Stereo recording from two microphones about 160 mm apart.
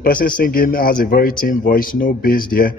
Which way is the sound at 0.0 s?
60° left (ahead or behind).